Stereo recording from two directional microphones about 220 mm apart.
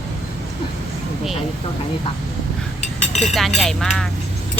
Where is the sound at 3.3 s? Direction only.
Centre (ahead or behind).